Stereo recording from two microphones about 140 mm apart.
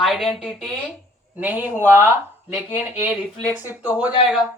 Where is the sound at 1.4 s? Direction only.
10° right (ahead or behind).